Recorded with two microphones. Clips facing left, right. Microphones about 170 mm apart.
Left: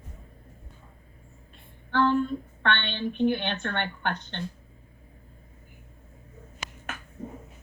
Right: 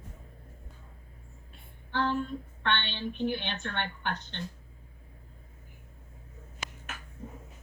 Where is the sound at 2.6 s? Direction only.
60° left (ahead or behind).